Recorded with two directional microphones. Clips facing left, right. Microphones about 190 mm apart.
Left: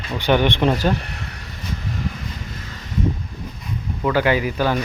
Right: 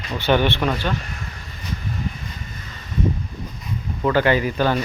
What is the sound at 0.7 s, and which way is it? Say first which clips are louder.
Speech: left 4 dB; 35° left (ahead or behind).